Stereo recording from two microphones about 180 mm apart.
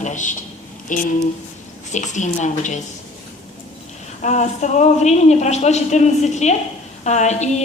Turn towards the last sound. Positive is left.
turn(degrees=40)  # may be behind; listen again after turning